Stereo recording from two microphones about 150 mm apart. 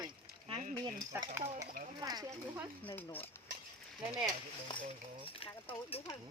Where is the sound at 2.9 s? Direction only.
15° left (ahead or behind).